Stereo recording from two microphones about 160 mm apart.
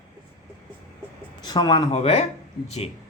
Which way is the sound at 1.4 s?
25° left (ahead or behind).